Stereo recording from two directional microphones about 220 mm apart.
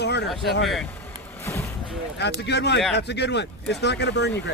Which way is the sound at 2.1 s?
50° left (ahead or behind).